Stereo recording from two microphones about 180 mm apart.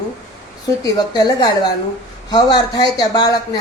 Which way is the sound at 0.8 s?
20° left (ahead or behind).